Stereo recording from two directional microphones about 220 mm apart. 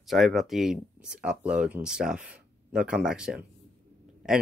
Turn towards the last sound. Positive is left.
turn(degrees=-5)  # may be behind; listen again after turning